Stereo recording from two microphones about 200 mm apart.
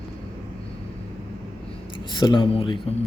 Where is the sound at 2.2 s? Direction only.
25° left (ahead or behind).